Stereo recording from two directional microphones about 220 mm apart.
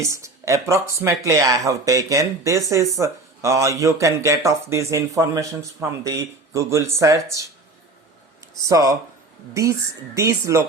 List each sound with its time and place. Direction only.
0.0 s speech: 15° right (ahead or behind)
8.6 s speech: 15° right (ahead or behind)
10.2 s speech: 15° right (ahead or behind)